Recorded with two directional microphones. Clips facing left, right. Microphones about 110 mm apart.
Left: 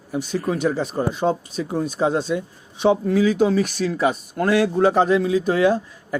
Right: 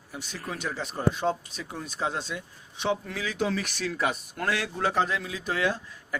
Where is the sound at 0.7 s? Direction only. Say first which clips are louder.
Left 10 dB; 40° left (ahead or behind).